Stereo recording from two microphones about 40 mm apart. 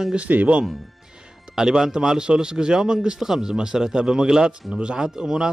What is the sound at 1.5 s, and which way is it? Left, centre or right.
A man's voice, centre.